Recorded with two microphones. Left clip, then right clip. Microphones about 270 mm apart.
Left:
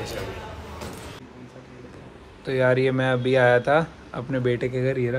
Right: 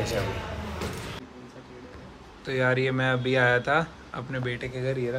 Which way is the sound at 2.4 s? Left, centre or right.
Centre.